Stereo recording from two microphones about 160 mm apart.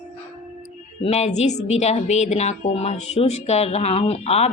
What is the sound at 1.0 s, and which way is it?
A woman's voice, 40° left (ahead or behind).